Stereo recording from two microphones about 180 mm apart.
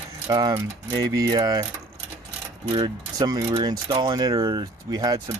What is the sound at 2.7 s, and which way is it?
Speech, 25° right (ahead or behind).